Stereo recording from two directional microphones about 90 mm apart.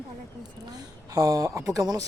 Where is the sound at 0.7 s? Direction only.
45° right (ahead or behind).